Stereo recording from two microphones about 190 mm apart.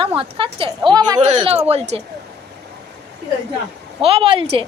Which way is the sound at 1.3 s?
35° right (ahead or behind).